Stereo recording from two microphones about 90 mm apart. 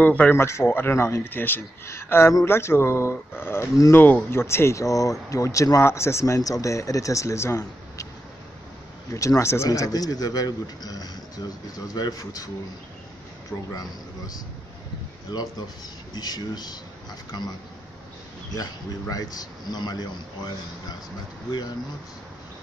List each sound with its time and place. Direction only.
0.0 s speech: 20° left (ahead or behind)
0.4 s speech: 30° left (ahead or behind)
9.1 s speech: 35° left (ahead or behind)
9.7 s speech: 45° left (ahead or behind)
13.7 s speech: 45° left (ahead or behind)